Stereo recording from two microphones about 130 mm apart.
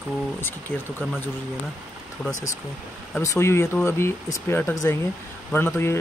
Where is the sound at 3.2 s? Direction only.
20° left (ahead or behind).